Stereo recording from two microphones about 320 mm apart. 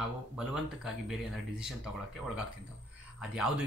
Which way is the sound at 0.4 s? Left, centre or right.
Centre.